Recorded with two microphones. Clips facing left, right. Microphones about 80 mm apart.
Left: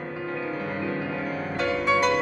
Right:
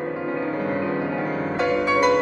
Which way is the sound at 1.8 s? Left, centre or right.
Centre.